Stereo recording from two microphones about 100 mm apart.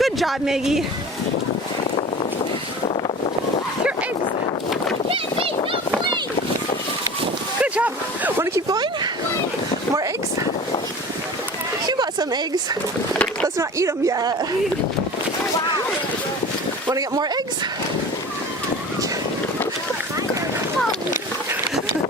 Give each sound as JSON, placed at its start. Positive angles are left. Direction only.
{"t": 0.0, "sound": "speech", "side_deg": 0}
{"t": 7.6, "sound": "speech", "side_deg": -15}
{"t": 11.9, "sound": "a sound", "side_deg": -45}
{"t": 13.6, "sound": "speech", "side_deg": -30}
{"t": 16.9, "sound": "speech", "side_deg": -40}